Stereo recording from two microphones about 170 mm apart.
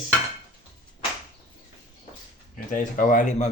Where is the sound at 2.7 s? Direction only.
50° left (ahead or behind).